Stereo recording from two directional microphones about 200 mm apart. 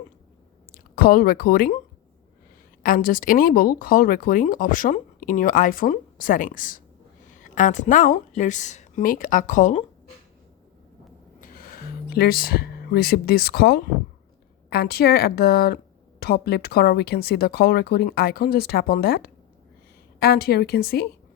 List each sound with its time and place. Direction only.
0.7 s speech: 45° left (ahead or behind)
2.8 s speech: 45° left (ahead or behind)
11.3 s music: 45° left (ahead or behind)
14.7 s speech: 50° left (ahead or behind)